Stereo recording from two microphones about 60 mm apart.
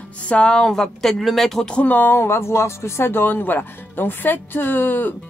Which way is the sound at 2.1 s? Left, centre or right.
Left.